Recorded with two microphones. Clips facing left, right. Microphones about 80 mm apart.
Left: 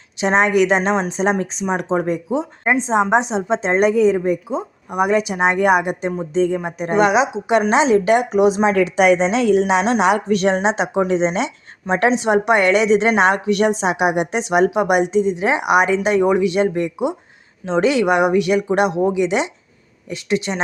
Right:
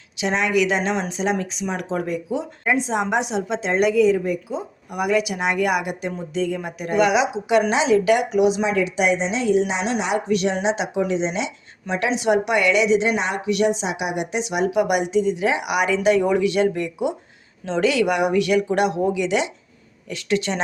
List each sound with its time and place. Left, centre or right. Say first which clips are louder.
0.2 s a woman's voice: left 5 dB; left
10.2 s a woman's voice: left 4 dB; left
14.7 s speech: left 3 dB; left